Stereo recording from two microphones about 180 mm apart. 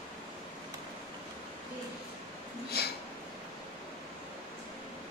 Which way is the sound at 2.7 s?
60° left (ahead or behind).